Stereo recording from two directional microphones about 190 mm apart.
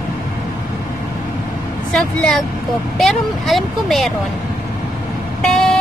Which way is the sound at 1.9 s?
Centre (ahead or behind).